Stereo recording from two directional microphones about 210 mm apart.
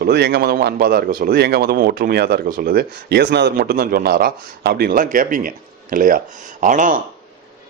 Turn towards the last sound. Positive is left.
turn(degrees=-40)  # may be behind; listen again after turning